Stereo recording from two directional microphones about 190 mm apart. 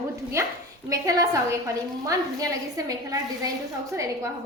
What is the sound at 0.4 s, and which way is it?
A woman's voice, 15° right (ahead or behind).